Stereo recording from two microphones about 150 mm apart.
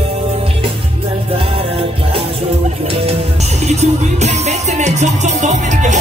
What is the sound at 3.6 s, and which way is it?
Music, 50° right (ahead or behind).